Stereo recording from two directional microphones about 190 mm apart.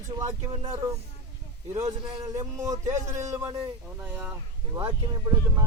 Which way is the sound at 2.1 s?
15° right (ahead or behind).